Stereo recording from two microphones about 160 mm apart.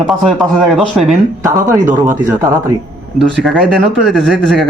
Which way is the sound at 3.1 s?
90° right.